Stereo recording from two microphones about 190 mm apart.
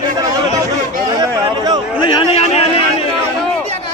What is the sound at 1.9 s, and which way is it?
Chatter, 30° left (ahead or behind).